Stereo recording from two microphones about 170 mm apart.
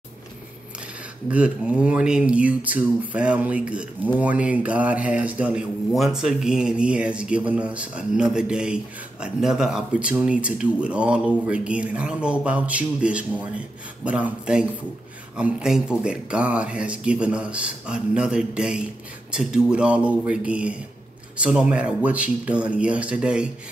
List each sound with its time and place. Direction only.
1.3 s speech: 5° right (ahead or behind)